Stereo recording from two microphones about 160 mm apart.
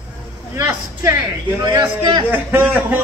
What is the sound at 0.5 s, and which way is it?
Speech, 15° right (ahead or behind).